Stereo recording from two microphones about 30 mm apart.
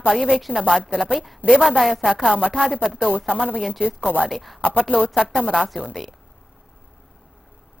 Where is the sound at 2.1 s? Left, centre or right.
Right.